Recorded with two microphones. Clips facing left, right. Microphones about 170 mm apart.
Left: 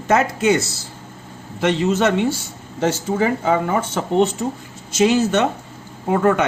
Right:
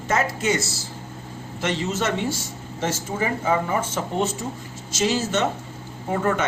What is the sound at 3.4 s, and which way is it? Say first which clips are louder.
Speech: left 4 dB; 65° left (ahead or behind).